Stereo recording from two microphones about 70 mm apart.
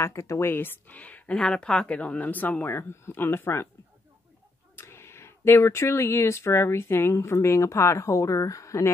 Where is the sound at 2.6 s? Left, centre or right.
Left.